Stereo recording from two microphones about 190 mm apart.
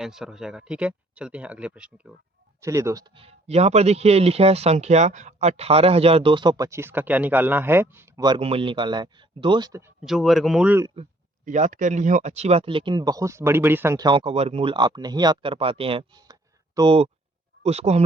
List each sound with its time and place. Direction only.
0.0 s speech: centre (ahead or behind)
3.2 s a man's voice: 30° right (ahead or behind)
10.0 s speech: centre (ahead or behind)
11.4 s a man's voice: 40° right (ahead or behind)